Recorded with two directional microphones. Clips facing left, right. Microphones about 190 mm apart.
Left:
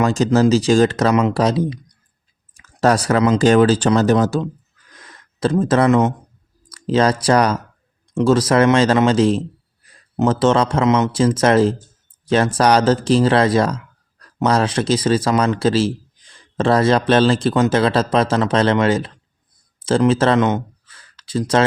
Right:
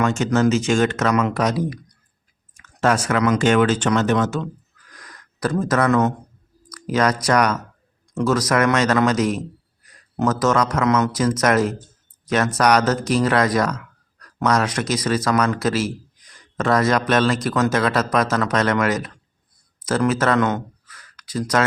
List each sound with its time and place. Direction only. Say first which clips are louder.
0.0 s speech: left 3 dB; 35° left (ahead or behind)
2.6 s speech: left 3 dB; 35° left (ahead or behind)
4.9 s gasp: even; 25° left (ahead or behind)
6.7 s a man's voice: left 4 dB; 25° left (ahead or behind)